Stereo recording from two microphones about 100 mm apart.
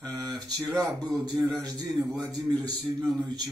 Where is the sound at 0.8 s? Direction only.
40° right (ahead or behind).